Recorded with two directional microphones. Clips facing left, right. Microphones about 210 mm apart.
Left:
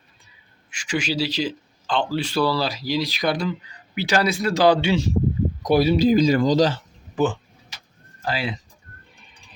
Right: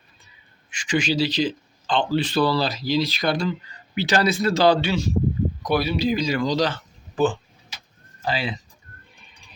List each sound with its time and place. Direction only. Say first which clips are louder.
0.7 s a man's voice: right 2 dB; 5° left (ahead or behind)
5.6 s a man's voice: left 6 dB; 40° left (ahead or behind)
8.3 s speech: even; 10° left (ahead or behind)